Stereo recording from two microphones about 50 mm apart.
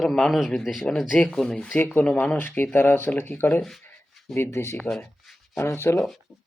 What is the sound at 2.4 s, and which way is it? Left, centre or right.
Speech, left.